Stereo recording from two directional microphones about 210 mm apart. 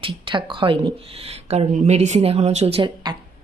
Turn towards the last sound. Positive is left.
turn(degrees=-25)  # may be behind; listen again after turning